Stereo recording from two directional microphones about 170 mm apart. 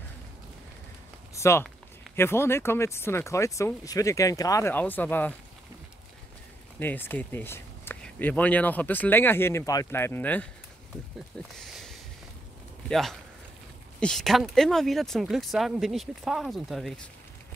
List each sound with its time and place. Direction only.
1.3 s speech: 15° left (ahead or behind)
6.8 s speech: 10° left (ahead or behind)